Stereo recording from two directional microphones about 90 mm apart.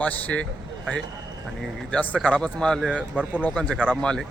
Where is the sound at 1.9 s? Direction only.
15° left (ahead or behind).